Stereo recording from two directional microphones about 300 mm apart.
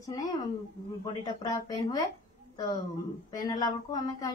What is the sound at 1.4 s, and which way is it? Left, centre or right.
Speech, centre.